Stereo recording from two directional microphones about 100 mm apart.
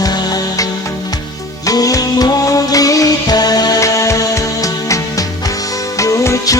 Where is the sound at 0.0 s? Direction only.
40° left (ahead or behind).